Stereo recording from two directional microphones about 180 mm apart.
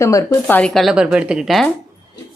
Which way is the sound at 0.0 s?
15° left (ahead or behind).